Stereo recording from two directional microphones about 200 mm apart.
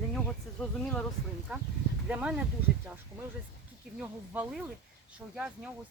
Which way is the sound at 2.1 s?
5° right (ahead or behind).